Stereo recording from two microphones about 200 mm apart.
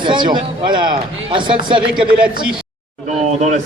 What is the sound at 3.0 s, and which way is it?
Speech, 35° right (ahead or behind).